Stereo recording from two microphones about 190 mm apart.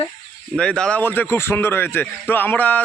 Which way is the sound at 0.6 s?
5° left (ahead or behind).